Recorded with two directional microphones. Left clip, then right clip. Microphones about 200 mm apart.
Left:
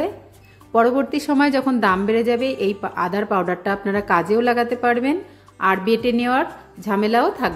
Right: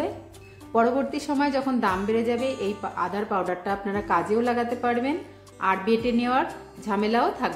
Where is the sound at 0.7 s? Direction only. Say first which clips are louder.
Left 5 dB; 35° left (ahead or behind).